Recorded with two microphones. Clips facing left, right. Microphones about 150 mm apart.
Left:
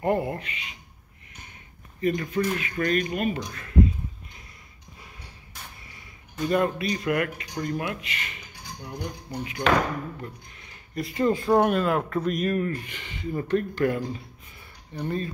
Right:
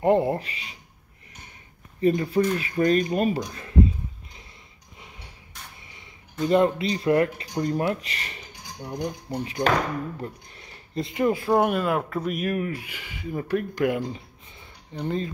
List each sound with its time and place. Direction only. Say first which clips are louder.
0.0 s speech: right 5 dB; 25° right (ahead or behind)
2.0 s speech: right 4 dB; 30° right (ahead or behind)
6.4 s speech: right 4 dB; 25° right (ahead or behind)
10.2 s a sound: right 4 dB; 35° right (ahead or behind)
11.1 s speech: even; 15° right (ahead or behind)